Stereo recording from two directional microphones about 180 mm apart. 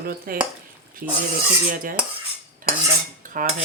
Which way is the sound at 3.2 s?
50° right (ahead or behind).